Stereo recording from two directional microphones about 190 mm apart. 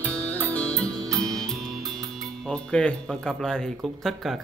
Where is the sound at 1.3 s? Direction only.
Centre (ahead or behind).